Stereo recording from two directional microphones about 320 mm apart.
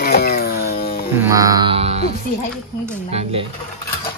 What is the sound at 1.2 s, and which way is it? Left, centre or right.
A man's voice, centre.